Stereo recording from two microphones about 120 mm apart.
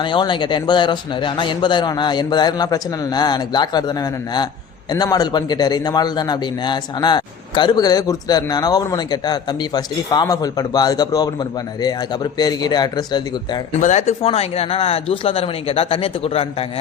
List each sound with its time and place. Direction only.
0.0 s a man's voice: 40° left (ahead or behind)
13.7 s a man's voice: 85° left; by 16.6 s 55° left (ahead or behind)